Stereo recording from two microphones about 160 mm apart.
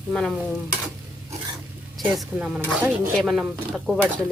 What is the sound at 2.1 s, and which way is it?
Speech, 5° right (ahead or behind).